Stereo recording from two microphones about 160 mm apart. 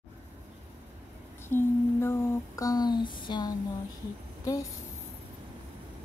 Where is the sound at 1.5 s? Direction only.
15° left (ahead or behind).